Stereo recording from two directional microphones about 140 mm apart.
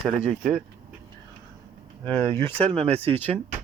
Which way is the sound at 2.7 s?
50° right (ahead or behind).